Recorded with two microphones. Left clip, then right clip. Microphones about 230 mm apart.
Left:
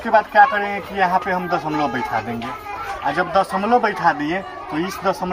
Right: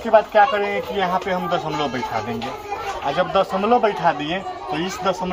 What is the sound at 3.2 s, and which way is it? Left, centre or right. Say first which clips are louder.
Speech: even; centre.